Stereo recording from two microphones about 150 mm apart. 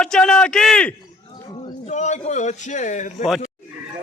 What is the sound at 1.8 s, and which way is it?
A man's voice, 50° left (ahead or behind).